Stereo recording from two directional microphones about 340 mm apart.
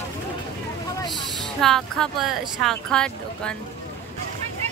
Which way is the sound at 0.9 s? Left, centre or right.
Centre.